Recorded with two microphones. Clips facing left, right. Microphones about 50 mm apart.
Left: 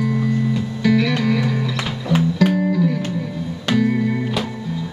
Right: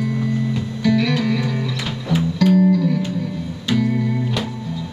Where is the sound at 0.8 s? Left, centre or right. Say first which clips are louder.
Even; centre.